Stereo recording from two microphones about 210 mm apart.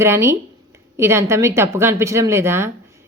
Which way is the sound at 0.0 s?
15° right (ahead or behind).